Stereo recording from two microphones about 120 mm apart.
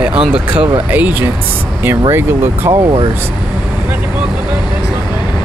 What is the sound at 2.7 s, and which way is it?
Speech, 40° right (ahead or behind).